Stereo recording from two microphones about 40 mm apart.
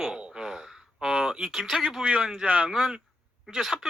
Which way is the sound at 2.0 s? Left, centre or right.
Right.